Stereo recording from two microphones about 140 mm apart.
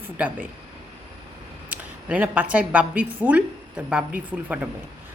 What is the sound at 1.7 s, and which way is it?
A woman's voice, 10° right (ahead or behind).